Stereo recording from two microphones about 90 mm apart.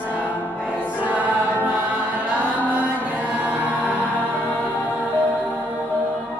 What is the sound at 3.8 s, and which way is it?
Music, 15° right (ahead or behind).